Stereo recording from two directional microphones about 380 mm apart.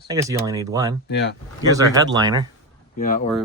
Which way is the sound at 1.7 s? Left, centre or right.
Centre.